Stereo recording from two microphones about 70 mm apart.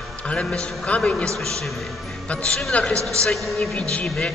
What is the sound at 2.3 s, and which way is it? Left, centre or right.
A man's voice, centre.